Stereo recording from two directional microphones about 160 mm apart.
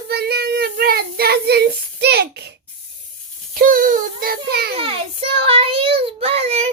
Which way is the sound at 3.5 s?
60° right (ahead or behind).